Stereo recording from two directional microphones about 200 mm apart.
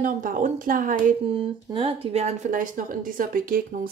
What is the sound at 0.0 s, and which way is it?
Speech, 40° right (ahead or behind).